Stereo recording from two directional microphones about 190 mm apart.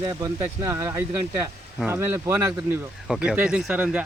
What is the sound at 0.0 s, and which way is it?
Speech, 20° right (ahead or behind).